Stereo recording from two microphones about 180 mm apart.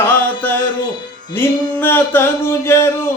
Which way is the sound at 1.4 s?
10° left (ahead or behind).